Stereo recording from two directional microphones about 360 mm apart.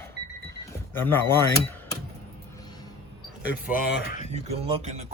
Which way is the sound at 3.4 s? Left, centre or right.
Left.